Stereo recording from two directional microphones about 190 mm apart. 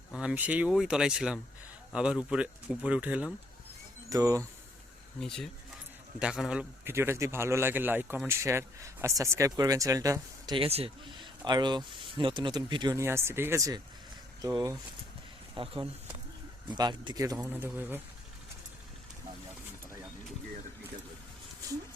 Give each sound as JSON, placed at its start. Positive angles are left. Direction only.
{"t": 0.1, "sound": "a man's voice", "side_deg": -5}
{"t": 5.2, "sound": "a man's voice", "side_deg": 0}